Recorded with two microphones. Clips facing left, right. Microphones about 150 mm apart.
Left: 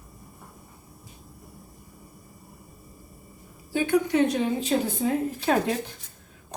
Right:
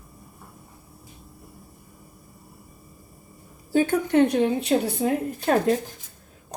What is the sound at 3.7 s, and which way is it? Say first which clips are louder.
A woman's voice: right 3 dB; 50° right (ahead or behind).